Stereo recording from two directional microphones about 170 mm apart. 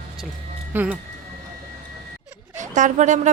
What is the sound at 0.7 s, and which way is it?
Speech, 10° right (ahead or behind).